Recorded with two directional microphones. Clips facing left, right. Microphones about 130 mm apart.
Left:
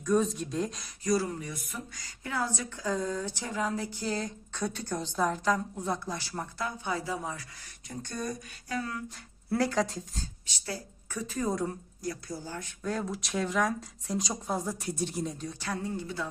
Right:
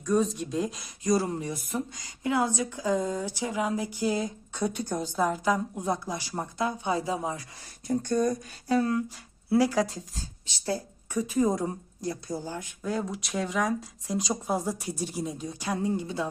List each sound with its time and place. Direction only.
0.0 s speech: centre (ahead or behind)
1.0 s speech: 25° right (ahead or behind)
7.9 s speech: 45° right (ahead or behind)
8.6 s speech: 30° right (ahead or behind)
9.5 s speech: 5° right (ahead or behind)
11.1 s speech: 15° right (ahead or behind)
12.8 s speech: centre (ahead or behind); by 16.3 s 20° right (ahead or behind)